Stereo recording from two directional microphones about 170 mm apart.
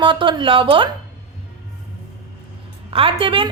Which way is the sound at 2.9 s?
30° right (ahead or behind).